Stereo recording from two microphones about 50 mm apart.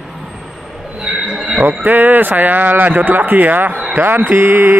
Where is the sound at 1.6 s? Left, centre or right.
Right.